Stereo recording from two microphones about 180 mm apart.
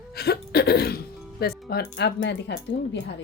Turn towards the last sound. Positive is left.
turn(degrees=70)  # may be behind; listen again after turning